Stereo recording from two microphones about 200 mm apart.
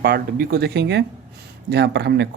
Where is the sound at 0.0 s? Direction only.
50° right (ahead or behind).